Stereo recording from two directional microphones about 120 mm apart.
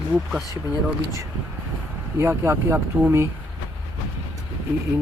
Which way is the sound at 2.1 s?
25° right (ahead or behind).